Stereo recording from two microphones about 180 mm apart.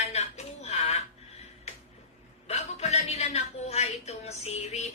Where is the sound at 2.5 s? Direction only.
40° left (ahead or behind).